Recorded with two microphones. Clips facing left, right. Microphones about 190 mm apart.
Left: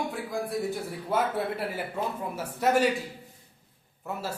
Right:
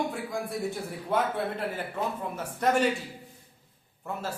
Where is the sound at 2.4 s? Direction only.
5° left (ahead or behind).